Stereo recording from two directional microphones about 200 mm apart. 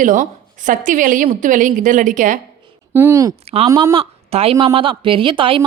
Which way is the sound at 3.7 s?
15° right (ahead or behind).